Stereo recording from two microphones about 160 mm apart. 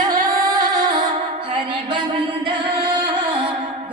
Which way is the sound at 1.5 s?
30° right (ahead or behind).